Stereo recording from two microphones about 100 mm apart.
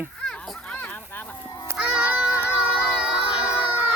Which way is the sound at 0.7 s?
20° left (ahead or behind).